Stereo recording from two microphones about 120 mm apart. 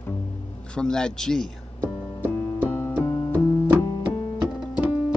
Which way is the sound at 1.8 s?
15° right (ahead or behind).